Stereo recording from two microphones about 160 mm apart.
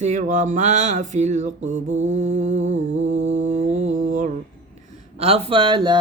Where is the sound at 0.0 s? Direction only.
50° right (ahead or behind).